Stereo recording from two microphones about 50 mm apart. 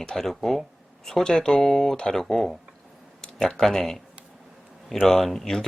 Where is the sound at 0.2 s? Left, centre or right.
Centre.